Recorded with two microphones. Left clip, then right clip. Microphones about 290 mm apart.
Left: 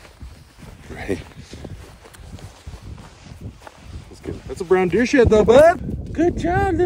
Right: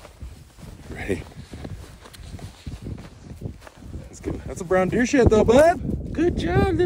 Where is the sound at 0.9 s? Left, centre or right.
Centre.